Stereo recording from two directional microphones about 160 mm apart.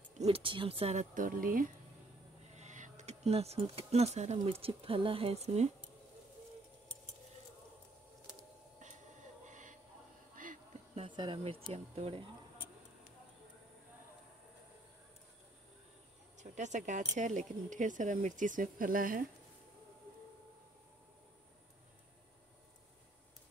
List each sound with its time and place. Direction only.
0.2 s speech: 35° right (ahead or behind); by 1.7 s 60° right (ahead or behind)
2.4 s speech: 45° right (ahead or behind)
8.8 s a sound: 50° right (ahead or behind)
11.0 s speech: 30° right (ahead or behind)
16.3 s speech: 50° right (ahead or behind)